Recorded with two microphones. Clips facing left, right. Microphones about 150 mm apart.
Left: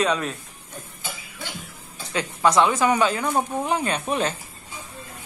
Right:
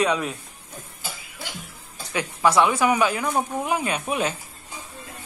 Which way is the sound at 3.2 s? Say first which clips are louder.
Left 1 dB; 10° left (ahead or behind).